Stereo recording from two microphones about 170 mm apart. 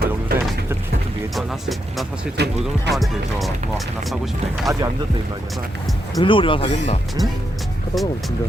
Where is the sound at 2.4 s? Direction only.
75° right (ahead or behind).